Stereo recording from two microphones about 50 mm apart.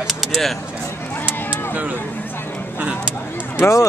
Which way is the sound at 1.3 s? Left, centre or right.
Right.